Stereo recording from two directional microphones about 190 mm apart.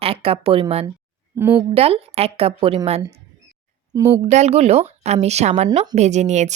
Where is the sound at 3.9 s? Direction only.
15° right (ahead or behind).